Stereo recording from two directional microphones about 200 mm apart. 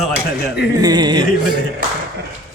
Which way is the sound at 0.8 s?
20° right (ahead or behind).